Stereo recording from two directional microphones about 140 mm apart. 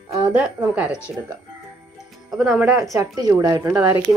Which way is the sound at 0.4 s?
10° right (ahead or behind).